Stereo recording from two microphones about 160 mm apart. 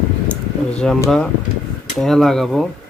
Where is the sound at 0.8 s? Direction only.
5° left (ahead or behind).